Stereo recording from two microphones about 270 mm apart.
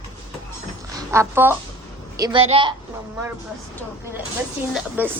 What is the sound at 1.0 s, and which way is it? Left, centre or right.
A woman's voice, centre.